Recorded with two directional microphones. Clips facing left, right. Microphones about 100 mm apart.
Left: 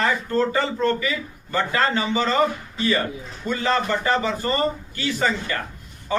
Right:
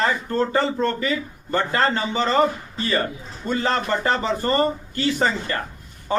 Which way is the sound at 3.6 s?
35° right (ahead or behind).